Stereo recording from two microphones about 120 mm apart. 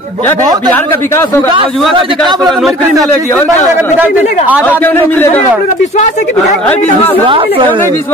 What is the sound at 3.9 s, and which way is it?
Speech, 15° right (ahead or behind).